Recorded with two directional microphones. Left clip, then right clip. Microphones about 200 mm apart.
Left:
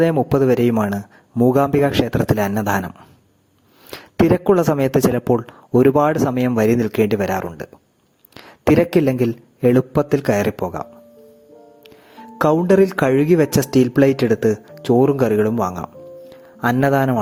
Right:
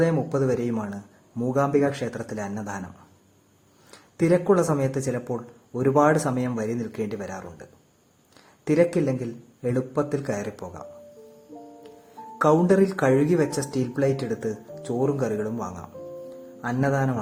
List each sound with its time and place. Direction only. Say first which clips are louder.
0.0 s speech: left 7 dB; 45° left (ahead or behind)
3.9 s a man's voice: left 5 dB; 45° left (ahead or behind)
12.4 s speech: left 5 dB; 40° left (ahead or behind)